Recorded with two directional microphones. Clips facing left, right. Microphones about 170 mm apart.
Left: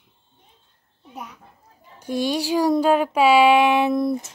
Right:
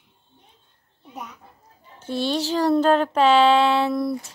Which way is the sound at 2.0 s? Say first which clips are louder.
Left 1 dB; 15° left (ahead or behind).